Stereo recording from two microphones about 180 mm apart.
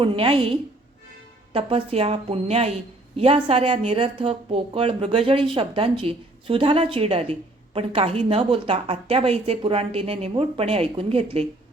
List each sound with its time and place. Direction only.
0.0 s speech: 30° right (ahead or behind)